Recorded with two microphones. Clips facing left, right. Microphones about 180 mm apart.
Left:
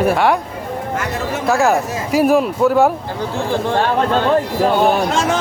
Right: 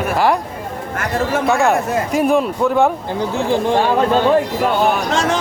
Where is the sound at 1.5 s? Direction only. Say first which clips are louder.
Left 3 dB; centre (ahead or behind).